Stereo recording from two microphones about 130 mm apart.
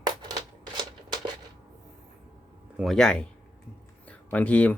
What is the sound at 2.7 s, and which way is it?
Speech, centre (ahead or behind).